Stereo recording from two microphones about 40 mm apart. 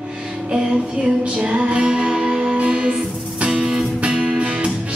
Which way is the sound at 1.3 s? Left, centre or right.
Right.